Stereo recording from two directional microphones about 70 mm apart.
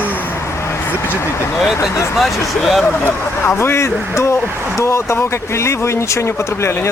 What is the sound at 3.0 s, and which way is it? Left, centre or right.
Speech, left.